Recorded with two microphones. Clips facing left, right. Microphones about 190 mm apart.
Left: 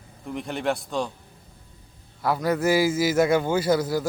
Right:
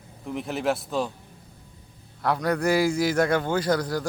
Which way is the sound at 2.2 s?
5° left (ahead or behind).